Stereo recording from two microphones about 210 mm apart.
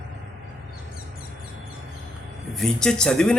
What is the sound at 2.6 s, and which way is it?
Speech, 5° left (ahead or behind).